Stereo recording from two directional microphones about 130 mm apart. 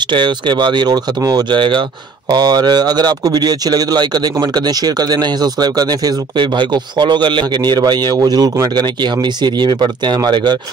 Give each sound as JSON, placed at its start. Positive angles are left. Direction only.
{"t": 0.1, "sound": "speech", "side_deg": -40}